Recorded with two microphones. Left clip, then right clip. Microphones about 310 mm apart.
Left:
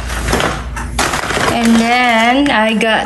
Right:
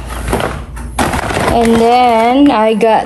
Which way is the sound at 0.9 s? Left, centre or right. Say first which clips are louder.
Right 1 dB; right.